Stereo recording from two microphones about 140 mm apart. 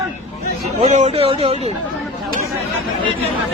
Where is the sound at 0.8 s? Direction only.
55° right (ahead or behind).